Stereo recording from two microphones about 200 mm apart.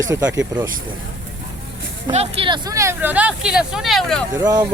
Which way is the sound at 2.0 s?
30° right (ahead or behind).